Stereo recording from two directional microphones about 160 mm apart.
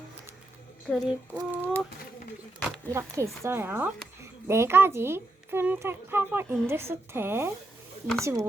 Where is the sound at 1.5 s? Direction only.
15° right (ahead or behind).